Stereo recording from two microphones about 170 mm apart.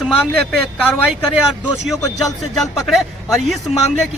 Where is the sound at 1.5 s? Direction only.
Centre (ahead or behind).